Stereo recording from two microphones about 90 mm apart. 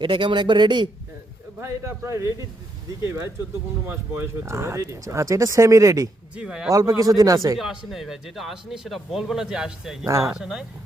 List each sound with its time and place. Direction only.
0.0 s a man's voice: 65° right (ahead or behind)
1.6 s speech: 30° right (ahead or behind)
6.3 s speech: 5° right (ahead or behind)
6.7 s speech: 40° right (ahead or behind)
7.9 s speech: centre (ahead or behind)